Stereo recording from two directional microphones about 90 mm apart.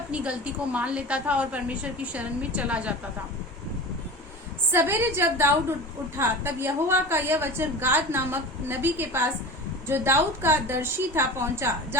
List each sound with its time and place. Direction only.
0.1 s a woman's voice: 10° right (ahead or behind)
4.7 s a woman's voice: 25° right (ahead or behind)